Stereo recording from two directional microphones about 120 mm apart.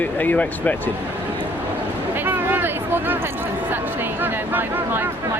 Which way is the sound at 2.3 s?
15° right (ahead or behind).